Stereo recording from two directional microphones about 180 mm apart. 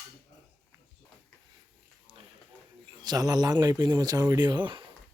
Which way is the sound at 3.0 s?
20° right (ahead or behind).